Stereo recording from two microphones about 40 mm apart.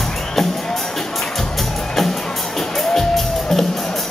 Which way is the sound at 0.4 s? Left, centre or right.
Centre.